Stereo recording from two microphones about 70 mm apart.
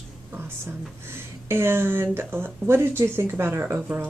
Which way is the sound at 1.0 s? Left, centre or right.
Right.